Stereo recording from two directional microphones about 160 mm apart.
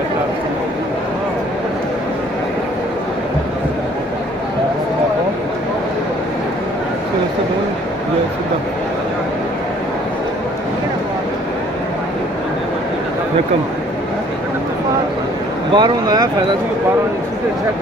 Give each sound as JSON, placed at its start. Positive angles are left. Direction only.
{"t": 15.7, "sound": "speech", "side_deg": -25}